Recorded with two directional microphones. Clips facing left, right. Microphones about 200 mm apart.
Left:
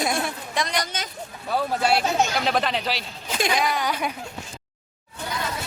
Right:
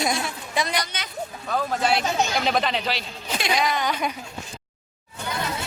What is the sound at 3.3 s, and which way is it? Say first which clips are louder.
Speech: left 1 dB; 50° left (ahead or behind).